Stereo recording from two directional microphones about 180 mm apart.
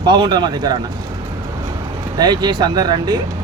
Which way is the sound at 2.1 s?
20° right (ahead or behind).